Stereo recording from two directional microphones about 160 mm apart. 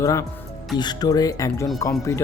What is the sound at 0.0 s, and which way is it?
A man's voice, 20° left (ahead or behind).